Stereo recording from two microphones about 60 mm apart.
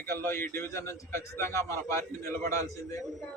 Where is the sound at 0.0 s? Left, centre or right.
Left.